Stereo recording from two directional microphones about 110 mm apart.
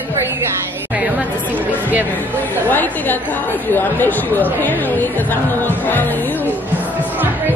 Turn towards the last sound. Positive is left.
turn(degrees=15)  # may be behind; listen again after turning